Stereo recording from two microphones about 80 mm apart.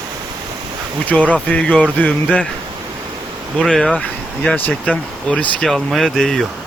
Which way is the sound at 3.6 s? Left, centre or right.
Centre.